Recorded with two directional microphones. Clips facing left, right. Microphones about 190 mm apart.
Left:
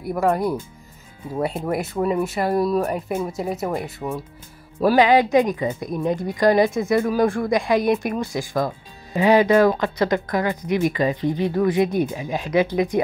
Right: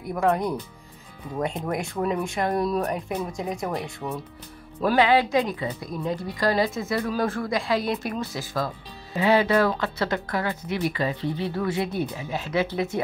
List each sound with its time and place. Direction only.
0.1 s speech: 5° left (ahead or behind)